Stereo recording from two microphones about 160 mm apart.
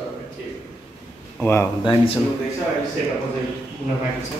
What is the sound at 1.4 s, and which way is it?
Speech, 15° left (ahead or behind).